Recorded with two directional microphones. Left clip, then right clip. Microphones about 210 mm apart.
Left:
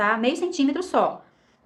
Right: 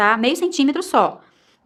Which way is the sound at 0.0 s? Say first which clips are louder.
Right 5 dB; 40° right (ahead or behind).